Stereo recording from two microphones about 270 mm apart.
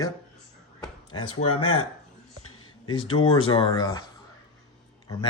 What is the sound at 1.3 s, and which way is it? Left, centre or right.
Speech, left.